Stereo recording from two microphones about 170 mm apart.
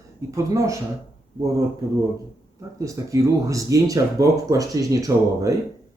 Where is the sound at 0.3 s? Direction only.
20° right (ahead or behind).